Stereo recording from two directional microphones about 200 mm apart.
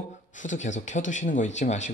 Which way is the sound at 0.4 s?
40° left (ahead or behind).